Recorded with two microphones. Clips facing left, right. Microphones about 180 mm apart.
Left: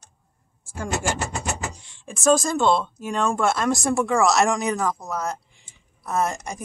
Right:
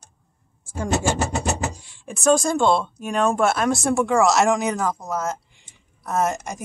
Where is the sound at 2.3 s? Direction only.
Centre (ahead or behind).